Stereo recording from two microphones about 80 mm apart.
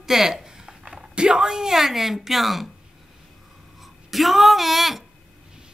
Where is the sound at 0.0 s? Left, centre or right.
Centre.